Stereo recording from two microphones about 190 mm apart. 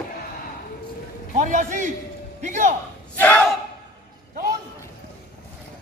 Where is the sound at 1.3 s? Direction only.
45° right (ahead or behind).